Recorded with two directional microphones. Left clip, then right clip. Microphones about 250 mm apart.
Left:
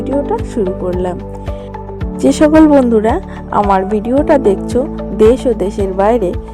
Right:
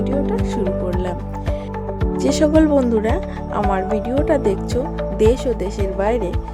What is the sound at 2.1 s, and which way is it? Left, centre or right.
Speech, centre.